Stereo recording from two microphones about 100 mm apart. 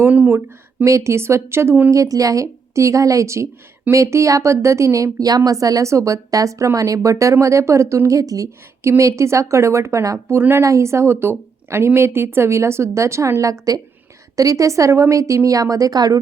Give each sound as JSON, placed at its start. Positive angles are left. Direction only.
{"t": 0.0, "sound": "a woman's voice", "side_deg": -20}